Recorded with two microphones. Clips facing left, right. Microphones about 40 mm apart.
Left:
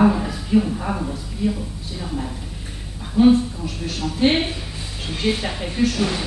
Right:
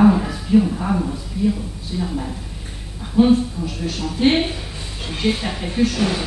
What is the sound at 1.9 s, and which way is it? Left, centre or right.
Speech, centre.